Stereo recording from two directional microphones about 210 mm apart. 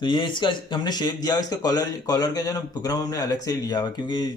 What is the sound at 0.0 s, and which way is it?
Speech, 20° left (ahead or behind).